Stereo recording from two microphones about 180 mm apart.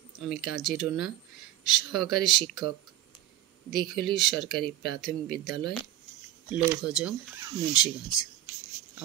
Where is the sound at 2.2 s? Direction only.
Centre (ahead or behind).